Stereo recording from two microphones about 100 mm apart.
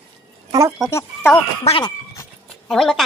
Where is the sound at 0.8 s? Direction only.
25° left (ahead or behind).